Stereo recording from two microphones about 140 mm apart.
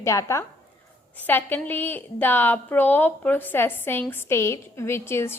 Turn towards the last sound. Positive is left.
turn(degrees=20)  # may be behind; listen again after turning